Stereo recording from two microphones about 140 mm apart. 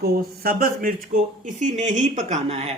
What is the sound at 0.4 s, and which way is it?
Speech, 90° right.